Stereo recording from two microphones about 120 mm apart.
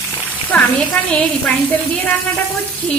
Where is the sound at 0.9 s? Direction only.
10° left (ahead or behind).